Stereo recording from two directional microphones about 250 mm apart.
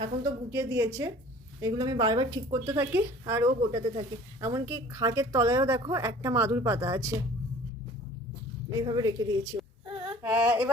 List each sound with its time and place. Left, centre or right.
0.0 s a woman's voice: centre
8.7 s a woman's voice: centre
10.2 s female singing: centre